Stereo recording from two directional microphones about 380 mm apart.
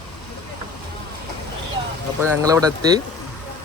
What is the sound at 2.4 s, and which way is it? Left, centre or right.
Speech, centre.